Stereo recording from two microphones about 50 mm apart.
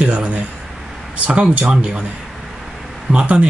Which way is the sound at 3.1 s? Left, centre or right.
Right.